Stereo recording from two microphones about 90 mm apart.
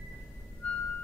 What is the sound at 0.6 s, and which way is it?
Music, 15° left (ahead or behind).